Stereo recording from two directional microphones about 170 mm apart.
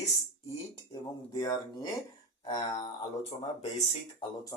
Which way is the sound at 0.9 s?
20° left (ahead or behind).